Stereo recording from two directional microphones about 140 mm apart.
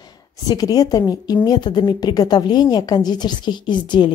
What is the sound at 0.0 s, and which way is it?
A woman's voice, 25° left (ahead or behind).